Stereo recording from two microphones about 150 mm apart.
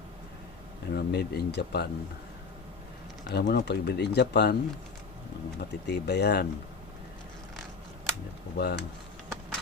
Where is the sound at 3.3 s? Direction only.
90° left.